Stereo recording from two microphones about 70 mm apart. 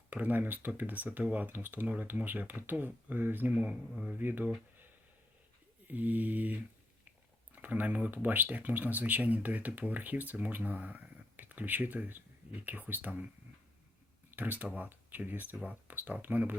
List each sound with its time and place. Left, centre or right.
0.1 s speech: right
5.9 s speech: right
14.3 s speech: right